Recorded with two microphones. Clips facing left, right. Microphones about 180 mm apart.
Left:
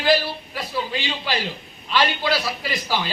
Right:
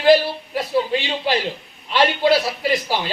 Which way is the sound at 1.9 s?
25° right (ahead or behind).